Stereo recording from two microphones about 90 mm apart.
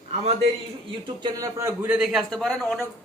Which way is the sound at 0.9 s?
70° right (ahead or behind).